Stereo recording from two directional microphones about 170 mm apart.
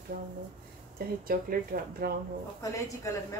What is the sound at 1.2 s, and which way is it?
Speech, 60° right (ahead or behind).